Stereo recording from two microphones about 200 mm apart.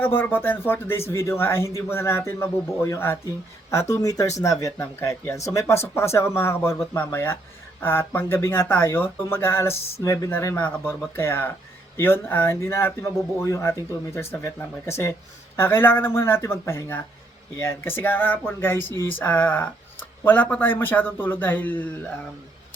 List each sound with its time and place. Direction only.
0.0 s speech: 10° left (ahead or behind)